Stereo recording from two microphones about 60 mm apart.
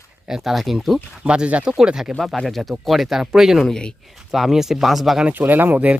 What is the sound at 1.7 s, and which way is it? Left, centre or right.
Speech, centre.